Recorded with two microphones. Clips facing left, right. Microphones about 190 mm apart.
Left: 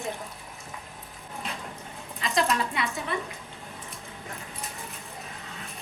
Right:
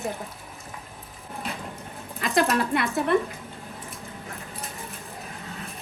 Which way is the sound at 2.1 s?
60° right (ahead or behind).